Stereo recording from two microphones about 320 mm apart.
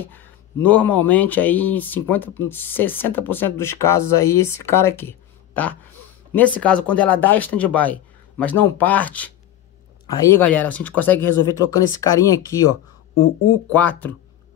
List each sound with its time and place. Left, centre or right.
0.0 s speech: centre
6.3 s speech: centre
13.1 s speech: left
13.7 s speech: centre